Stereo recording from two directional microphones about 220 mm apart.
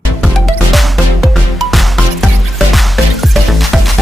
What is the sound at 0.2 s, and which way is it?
Music, centre (ahead or behind).